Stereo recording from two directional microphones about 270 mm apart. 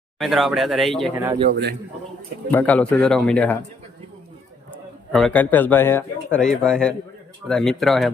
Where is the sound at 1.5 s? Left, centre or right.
Right.